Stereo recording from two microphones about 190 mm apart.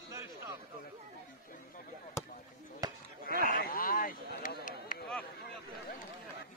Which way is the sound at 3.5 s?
50° left (ahead or behind).